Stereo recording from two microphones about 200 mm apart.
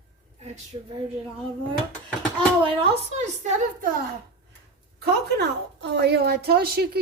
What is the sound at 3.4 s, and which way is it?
Speech, 35° right (ahead or behind).